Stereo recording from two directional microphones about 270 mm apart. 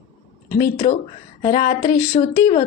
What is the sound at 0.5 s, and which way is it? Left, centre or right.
Speech, centre.